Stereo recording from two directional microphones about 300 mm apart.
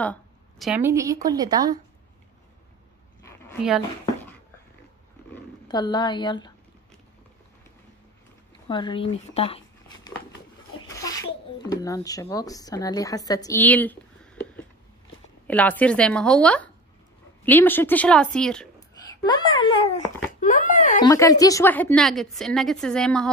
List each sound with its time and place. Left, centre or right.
0.0 s a woman's voice: centre
3.2 s dog: centre
4.0 s a sound: centre
5.3 s speech: centre
8.6 s a woman's voice: centre
19.2 s a child's voice: centre
21.0 s a woman's voice: centre